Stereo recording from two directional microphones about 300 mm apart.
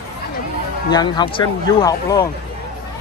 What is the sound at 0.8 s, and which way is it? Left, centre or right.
Speech, centre.